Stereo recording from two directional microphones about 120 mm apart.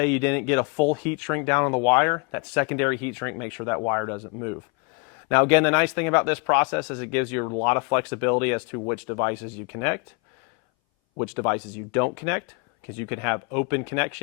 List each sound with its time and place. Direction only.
0.0 s speech: 10° left (ahead or behind)
11.2 s speech: 15° left (ahead or behind)